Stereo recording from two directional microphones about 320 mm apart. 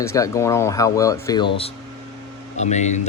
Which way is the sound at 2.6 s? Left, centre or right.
Left.